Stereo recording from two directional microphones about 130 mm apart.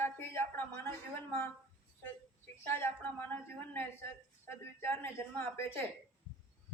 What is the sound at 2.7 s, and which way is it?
A woman's voice, 15° left (ahead or behind).